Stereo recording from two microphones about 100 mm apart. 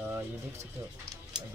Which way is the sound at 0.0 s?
25° right (ahead or behind).